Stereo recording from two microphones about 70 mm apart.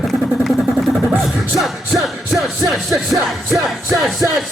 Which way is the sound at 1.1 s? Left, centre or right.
Centre.